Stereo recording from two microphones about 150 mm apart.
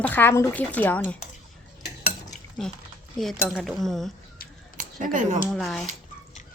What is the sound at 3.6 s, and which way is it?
Speech, centre (ahead or behind).